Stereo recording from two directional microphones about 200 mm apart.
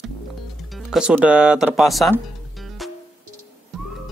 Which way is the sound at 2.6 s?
Centre (ahead or behind).